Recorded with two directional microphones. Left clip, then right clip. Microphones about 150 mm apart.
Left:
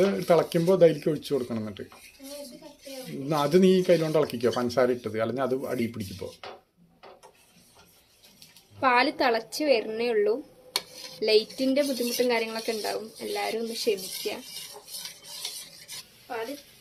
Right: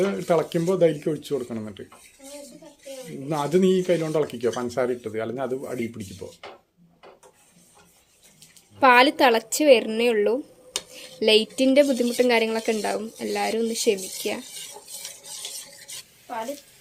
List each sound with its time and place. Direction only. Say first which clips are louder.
0.0 s speech: even; 5° left (ahead or behind)
3.2 s speech: even; 5° left (ahead or behind)
8.8 s a woman's voice: right 7 dB; 70° right (ahead or behind)